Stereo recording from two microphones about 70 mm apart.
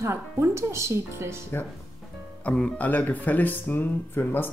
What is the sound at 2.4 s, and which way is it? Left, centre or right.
Speech, centre.